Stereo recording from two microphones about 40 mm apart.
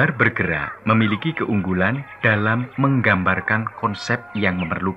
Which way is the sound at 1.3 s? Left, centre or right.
Right.